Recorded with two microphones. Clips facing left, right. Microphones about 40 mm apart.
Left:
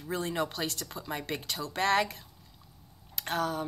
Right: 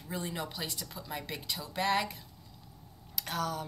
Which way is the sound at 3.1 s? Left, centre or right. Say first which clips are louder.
Left 3 dB; left.